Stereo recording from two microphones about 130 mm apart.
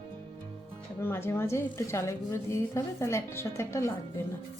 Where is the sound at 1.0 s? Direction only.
20° left (ahead or behind).